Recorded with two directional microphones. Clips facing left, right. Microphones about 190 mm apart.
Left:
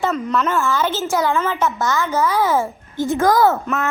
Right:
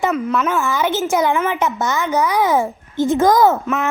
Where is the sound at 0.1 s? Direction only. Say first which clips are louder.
Right 1 dB; 10° right (ahead or behind).